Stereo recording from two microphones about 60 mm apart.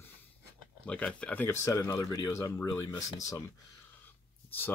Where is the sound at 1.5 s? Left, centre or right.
Left.